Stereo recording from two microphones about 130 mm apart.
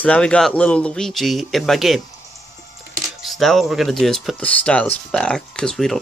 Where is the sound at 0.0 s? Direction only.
10° left (ahead or behind).